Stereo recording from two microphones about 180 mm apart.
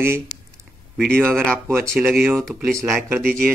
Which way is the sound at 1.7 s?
15° right (ahead or behind).